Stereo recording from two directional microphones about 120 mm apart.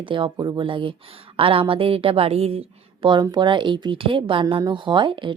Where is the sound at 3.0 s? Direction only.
40° right (ahead or behind).